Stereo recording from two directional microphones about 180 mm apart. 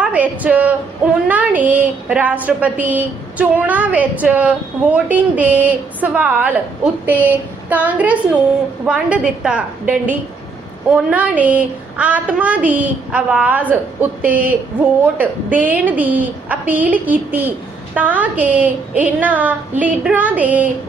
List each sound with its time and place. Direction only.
0.0 s a woman's voice: 10° right (ahead or behind)